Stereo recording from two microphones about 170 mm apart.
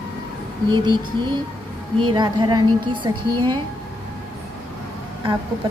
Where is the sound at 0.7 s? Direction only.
25° right (ahead or behind).